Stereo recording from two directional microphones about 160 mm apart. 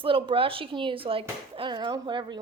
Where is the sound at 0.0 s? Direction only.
35° right (ahead or behind).